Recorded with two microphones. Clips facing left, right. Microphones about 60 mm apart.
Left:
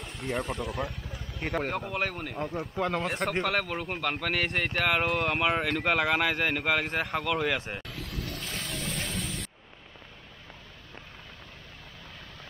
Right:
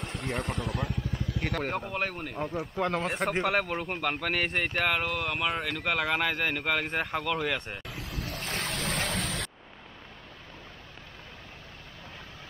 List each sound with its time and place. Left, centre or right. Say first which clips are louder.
0.2 s speech: left 2 dB; centre
8.2 s boat: right 3 dB; right
8.6 s a sound: right 4 dB; right